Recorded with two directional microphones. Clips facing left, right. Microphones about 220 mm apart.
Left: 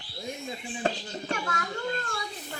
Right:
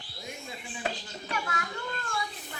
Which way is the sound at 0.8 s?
45° left (ahead or behind).